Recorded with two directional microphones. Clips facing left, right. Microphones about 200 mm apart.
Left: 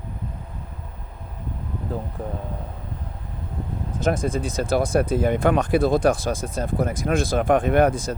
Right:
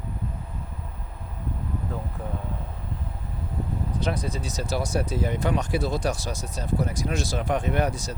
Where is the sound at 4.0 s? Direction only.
50° left (ahead or behind).